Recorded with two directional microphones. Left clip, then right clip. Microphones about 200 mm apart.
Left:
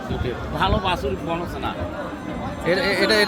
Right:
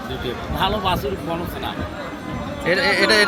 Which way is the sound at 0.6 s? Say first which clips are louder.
Right 1 dB; 15° right (ahead or behind).